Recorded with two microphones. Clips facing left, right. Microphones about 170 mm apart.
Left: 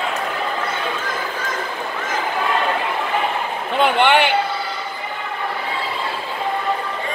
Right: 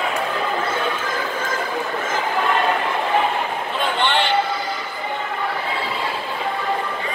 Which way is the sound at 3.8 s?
60° left (ahead or behind).